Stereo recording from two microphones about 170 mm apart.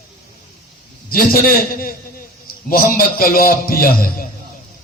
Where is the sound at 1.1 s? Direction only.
60° left (ahead or behind).